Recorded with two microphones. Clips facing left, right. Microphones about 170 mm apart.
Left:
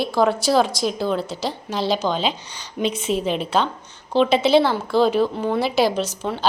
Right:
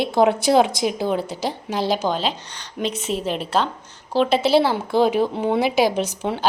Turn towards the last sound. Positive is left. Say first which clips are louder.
# right 1 dB
turn(degrees=-15)  # may be behind; listen again after turning